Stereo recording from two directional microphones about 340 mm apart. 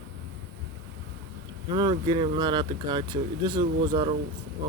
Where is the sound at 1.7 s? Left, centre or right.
Centre.